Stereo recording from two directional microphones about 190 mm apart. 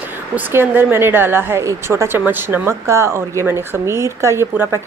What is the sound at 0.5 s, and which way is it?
Speech, 10° right (ahead or behind).